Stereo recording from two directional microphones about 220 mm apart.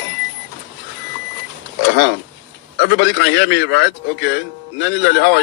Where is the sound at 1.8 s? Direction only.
50° left (ahead or behind).